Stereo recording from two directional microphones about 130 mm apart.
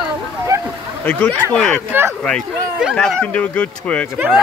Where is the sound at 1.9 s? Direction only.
15° right (ahead or behind).